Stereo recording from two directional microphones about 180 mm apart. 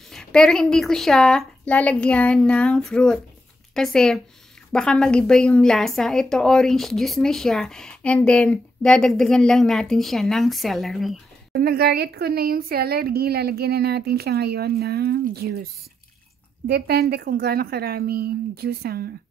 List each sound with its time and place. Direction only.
0.1 s a woman's voice: 5° left (ahead or behind)
11.5 s speech: 60° right (ahead or behind)
16.6 s speech: 60° right (ahead or behind)